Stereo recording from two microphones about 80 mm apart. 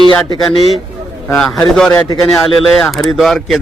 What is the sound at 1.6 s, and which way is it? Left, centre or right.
Speech, centre.